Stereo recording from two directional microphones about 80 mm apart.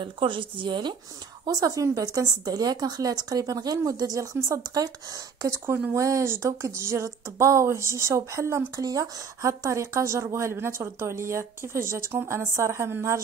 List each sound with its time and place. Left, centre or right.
0.0 s speech: right
1.4 s a woman's voice: right